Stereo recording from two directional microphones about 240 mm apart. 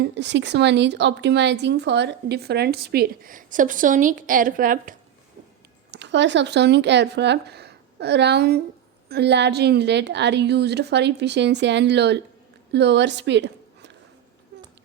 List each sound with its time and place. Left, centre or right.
0.0 s speech: right
5.9 s a woman's voice: right